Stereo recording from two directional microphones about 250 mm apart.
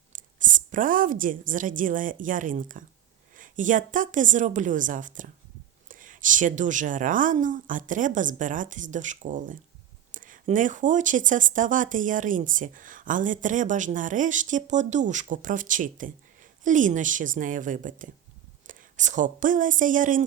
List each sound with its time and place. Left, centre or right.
0.1 s a woman's voice: right